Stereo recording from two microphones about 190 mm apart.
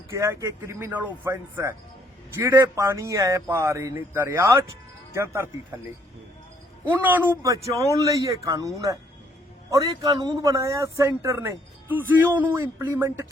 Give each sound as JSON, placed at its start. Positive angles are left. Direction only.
{"t": 0.1, "sound": "a man's voice", "side_deg": -15}
{"t": 6.8, "sound": "a man's voice", "side_deg": -10}